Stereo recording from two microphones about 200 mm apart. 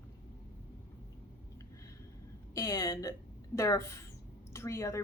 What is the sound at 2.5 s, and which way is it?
Speech, 15° left (ahead or behind).